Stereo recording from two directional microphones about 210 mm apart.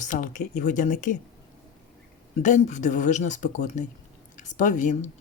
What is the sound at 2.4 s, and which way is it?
Speech, 35° left (ahead or behind).